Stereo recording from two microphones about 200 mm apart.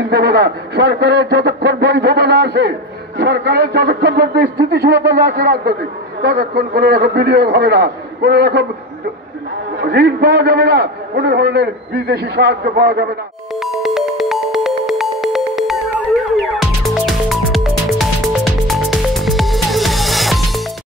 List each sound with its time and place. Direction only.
0.1 s a man's voice: 55° right (ahead or behind)
9.8 s a man's voice: 55° right (ahead or behind)
13.6 s music: centre (ahead or behind)